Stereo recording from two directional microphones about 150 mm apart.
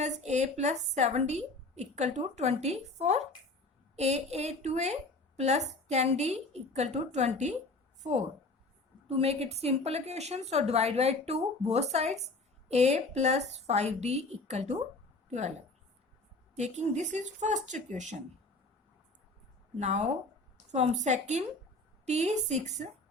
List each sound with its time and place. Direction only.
0.0 s a woman's voice: 50° right (ahead or behind)
19.8 s a woman's voice: 50° right (ahead or behind)